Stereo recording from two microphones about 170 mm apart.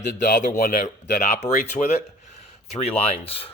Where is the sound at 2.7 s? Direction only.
40° left (ahead or behind).